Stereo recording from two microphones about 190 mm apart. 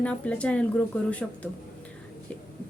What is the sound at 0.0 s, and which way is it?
A woman's voice, 5° left (ahead or behind).